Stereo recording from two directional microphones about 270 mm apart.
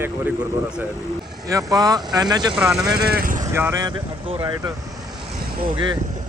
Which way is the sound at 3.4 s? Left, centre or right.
Centre.